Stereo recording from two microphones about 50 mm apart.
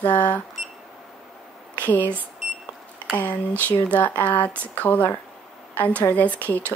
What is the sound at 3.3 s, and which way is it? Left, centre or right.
Speech, left.